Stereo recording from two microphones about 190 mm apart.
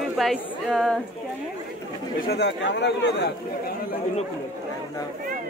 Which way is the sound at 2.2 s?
65° left (ahead or behind).